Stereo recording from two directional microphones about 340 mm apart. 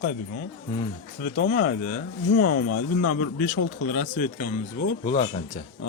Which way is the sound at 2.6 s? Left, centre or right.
Left.